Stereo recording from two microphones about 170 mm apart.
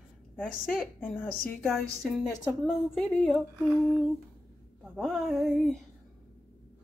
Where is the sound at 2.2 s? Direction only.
Centre (ahead or behind).